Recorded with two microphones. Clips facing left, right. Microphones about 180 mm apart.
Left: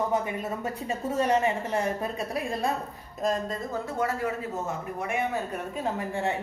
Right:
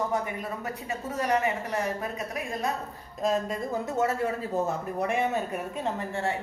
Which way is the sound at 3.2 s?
5° right (ahead or behind).